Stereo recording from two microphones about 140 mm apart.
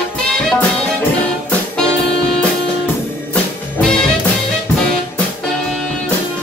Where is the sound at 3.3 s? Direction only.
5° left (ahead or behind).